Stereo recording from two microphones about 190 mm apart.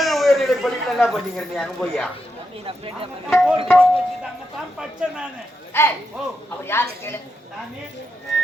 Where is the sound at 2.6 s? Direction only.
30° right (ahead or behind).